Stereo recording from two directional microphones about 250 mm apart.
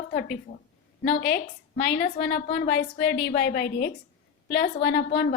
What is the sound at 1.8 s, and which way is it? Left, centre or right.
A woman's voice, left.